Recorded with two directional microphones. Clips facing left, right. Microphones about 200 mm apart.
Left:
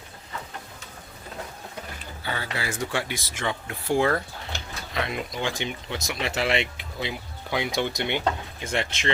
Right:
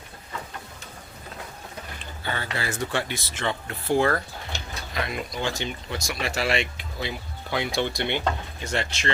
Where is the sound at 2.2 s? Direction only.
10° left (ahead or behind).